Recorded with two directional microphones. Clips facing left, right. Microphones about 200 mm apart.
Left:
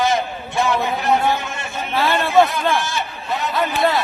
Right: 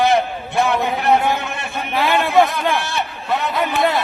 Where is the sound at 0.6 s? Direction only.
60° right (ahead or behind).